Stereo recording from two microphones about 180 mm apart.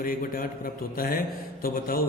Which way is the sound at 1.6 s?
55° left (ahead or behind).